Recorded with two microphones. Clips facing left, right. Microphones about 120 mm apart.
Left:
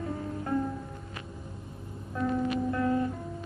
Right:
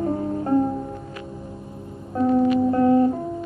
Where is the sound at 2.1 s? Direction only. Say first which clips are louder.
Right 11 dB; 35° right (ahead or behind).